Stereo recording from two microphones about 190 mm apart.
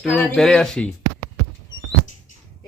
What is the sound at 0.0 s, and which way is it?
Speech, 5° left (ahead or behind).